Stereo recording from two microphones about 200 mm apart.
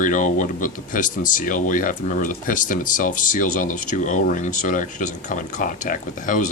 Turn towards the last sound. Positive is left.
turn(degrees=40)  # may be behind; listen again after turning